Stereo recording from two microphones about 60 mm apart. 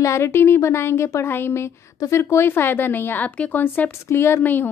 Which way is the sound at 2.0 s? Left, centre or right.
Left.